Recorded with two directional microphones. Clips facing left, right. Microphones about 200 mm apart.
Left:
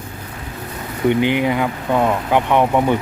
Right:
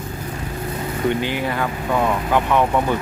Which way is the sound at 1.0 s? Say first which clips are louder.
Left 6 dB; 20° left (ahead or behind).